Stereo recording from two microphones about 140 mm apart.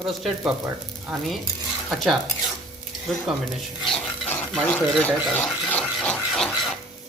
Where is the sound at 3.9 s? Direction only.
15° left (ahead or behind).